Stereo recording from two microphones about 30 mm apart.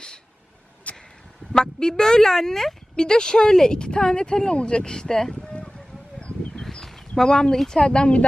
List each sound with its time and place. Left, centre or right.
0.9 s a sound: left
1.5 s speech: left
2.9 s speech: left
4.8 s speech: left
6.5 s a sound: centre
7.3 s speech: left